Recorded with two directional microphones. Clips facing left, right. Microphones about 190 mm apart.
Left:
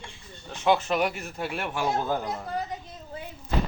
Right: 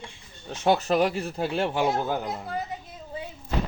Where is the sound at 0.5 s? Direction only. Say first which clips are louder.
Right 2 dB; 40° right (ahead or behind).